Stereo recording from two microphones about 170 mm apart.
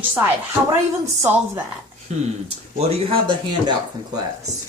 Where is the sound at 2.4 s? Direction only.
40° right (ahead or behind).